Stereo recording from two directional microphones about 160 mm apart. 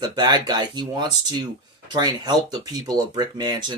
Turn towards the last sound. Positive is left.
turn(degrees=-30)  # may be behind; listen again after turning